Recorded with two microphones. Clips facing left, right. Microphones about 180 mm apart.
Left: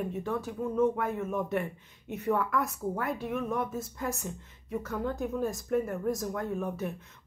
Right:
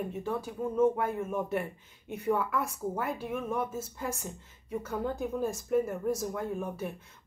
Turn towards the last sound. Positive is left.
turn(degrees=-10)  # may be behind; listen again after turning